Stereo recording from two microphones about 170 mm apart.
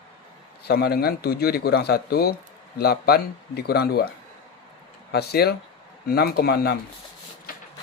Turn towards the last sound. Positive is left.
turn(degrees=60)  # may be behind; listen again after turning